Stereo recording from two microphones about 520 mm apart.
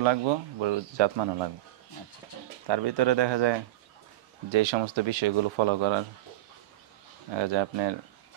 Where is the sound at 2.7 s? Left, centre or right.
Right.